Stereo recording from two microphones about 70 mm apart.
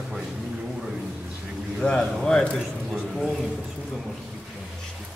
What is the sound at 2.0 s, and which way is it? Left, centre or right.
Speech, centre.